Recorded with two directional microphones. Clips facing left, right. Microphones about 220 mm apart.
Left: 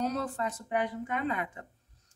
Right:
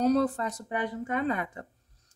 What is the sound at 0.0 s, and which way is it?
Speech, 35° right (ahead or behind).